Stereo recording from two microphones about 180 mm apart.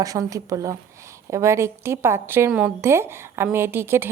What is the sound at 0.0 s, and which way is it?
A woman's voice, 20° right (ahead or behind).